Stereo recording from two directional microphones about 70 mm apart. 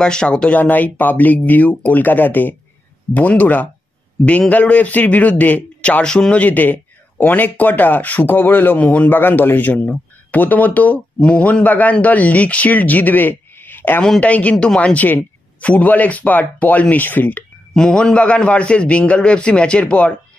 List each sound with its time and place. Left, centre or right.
0.0 s a man's voice: centre; by 17.5 s left
17.7 s a man's voice: centre